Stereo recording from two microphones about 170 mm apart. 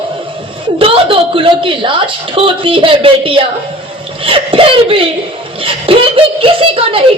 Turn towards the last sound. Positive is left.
turn(degrees=-35)  # may be behind; listen again after turning